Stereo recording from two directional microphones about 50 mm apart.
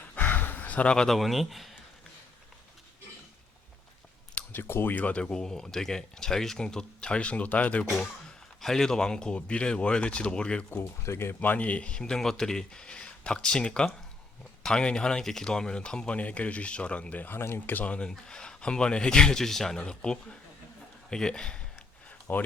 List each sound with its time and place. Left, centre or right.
0.2 s a sound: left
1.0 s speech: centre
4.5 s speech: left
5.1 s speech: centre
8.6 s speech: centre
10.8 s speech: left
11.3 s speech: left; by 16.1 s centre
16.1 s speech: left
17.4 s speech: left
17.7 s speech: left
18.3 s speech: centre
22.3 s speech: left